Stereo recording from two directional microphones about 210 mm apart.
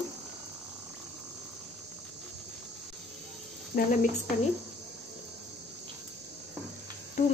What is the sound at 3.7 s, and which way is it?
Speech, 40° left (ahead or behind).